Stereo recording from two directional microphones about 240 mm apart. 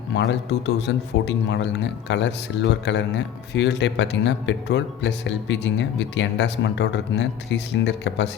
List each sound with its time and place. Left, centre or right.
0.1 s speech: left